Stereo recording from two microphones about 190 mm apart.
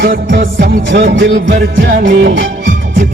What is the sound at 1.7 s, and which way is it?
Music, 65° right (ahead or behind).